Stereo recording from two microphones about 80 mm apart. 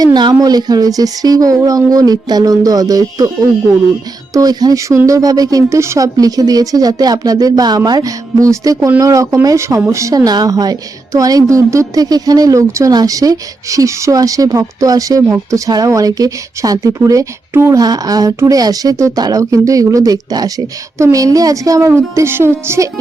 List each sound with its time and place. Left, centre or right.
0.0 s speech: right
4.4 s speech: right
17.7 s speech: right